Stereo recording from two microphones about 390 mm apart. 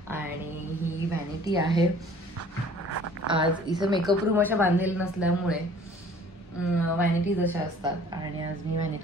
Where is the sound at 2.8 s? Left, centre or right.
Right.